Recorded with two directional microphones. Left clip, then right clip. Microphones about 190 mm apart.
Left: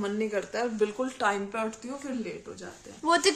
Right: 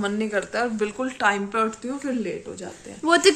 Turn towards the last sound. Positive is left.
turn(degrees=0)  # may be behind; listen again after turning